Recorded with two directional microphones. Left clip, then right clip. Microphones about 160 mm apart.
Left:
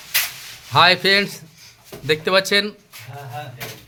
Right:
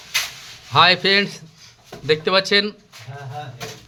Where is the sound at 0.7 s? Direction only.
5° left (ahead or behind).